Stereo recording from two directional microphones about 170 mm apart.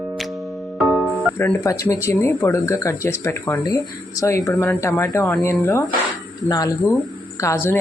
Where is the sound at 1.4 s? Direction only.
15° left (ahead or behind).